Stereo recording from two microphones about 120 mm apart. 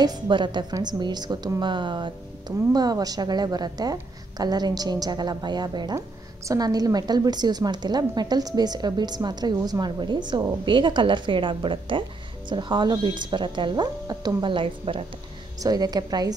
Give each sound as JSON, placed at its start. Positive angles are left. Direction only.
{"t": 0.0, "sound": "a woman's voice", "side_deg": -40}
{"t": 15.6, "sound": "a woman's voice", "side_deg": -35}